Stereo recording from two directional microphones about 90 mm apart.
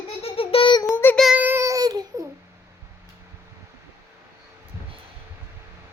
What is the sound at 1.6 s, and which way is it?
Babbling, 40° right (ahead or behind).